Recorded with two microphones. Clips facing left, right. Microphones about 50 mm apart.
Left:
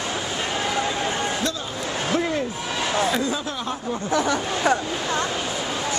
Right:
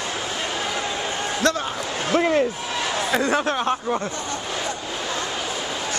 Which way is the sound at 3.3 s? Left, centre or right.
Right.